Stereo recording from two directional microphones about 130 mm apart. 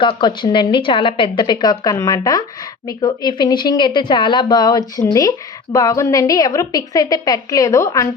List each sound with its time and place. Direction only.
0.0 s a woman's voice: 35° left (ahead or behind)